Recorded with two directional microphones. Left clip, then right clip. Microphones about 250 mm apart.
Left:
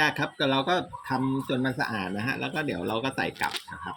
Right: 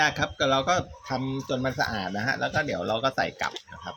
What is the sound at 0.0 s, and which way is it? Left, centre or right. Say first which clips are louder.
Speech: right 1 dB; centre.